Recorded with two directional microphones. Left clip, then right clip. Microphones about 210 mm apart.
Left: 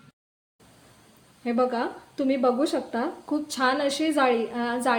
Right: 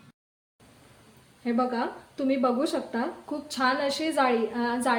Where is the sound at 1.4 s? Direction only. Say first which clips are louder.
Left 3 dB; 20° left (ahead or behind).